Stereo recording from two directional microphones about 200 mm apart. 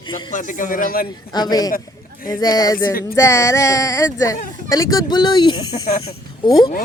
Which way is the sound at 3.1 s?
15° left (ahead or behind).